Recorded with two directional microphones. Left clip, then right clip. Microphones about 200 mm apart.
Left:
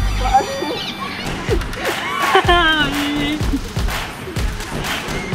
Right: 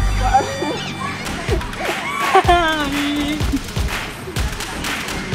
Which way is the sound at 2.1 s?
45° right (ahead or behind).